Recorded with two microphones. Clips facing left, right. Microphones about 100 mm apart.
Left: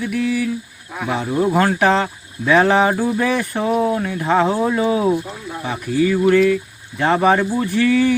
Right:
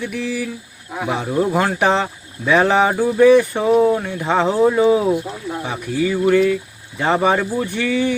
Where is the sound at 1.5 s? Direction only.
5° right (ahead or behind).